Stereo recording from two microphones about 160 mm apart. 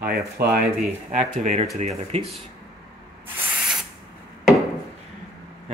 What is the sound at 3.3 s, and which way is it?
Spray, 5° right (ahead or behind).